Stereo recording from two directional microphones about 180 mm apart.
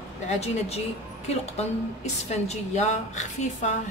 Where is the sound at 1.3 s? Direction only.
35° left (ahead or behind).